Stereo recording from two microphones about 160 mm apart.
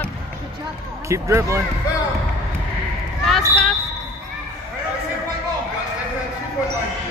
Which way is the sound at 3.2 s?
Centre (ahead or behind).